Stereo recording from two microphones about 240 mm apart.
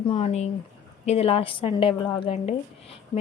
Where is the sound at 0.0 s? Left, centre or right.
Left.